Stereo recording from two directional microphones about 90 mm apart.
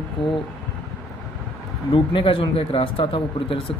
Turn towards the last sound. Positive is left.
turn(degrees=80)